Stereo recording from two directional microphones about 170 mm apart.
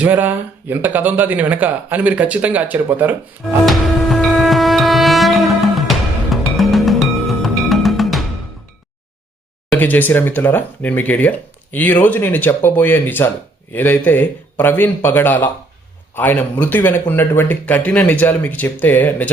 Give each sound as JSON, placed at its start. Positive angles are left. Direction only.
{"t": 0.0, "sound": "speech", "side_deg": -10}
{"t": 3.7, "sound": "music", "side_deg": 0}
{"t": 9.7, "sound": "speech", "side_deg": 10}